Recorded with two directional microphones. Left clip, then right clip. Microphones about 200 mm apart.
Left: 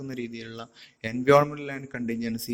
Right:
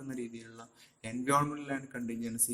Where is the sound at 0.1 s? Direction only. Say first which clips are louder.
Left 3 dB; 35° left (ahead or behind).